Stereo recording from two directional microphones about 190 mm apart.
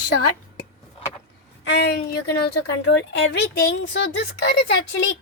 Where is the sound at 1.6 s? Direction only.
65° left (ahead or behind).